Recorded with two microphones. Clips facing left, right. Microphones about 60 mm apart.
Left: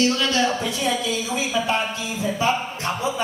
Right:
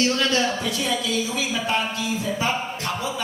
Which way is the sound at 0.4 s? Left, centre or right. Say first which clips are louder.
Left 2 dB; left.